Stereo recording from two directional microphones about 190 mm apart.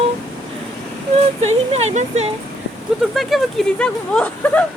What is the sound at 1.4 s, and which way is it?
Speech, 35° right (ahead or behind).